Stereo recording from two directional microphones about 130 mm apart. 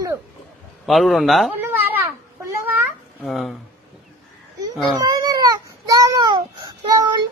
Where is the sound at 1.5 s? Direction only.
15° right (ahead or behind).